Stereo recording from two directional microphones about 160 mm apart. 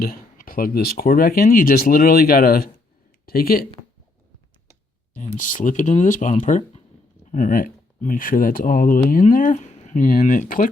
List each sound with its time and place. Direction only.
0.0 s speech: 65° left (ahead or behind)
5.1 s speech: 50° left (ahead or behind)